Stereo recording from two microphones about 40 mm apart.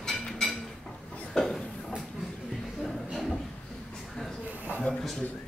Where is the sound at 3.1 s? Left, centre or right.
Centre.